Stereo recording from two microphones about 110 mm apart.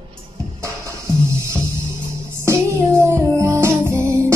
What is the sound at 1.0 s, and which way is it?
Music, 25° right (ahead or behind).